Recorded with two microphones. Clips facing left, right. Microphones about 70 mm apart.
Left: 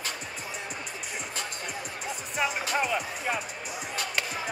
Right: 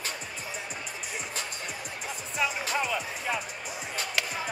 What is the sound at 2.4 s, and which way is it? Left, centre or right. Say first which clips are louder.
Music: left 1 dB; left.